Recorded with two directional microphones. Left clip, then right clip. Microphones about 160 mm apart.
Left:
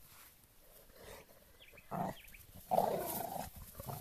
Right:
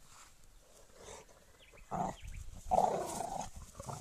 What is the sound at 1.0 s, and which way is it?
Wild animals, 10° right (ahead or behind).